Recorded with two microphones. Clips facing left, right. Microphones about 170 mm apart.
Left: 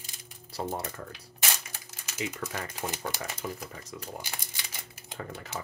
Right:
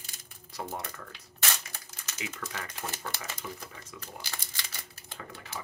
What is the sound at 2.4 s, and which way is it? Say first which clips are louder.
Speech: left 4 dB; 30° left (ahead or behind).